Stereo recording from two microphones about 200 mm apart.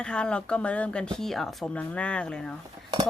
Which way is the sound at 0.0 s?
5° left (ahead or behind).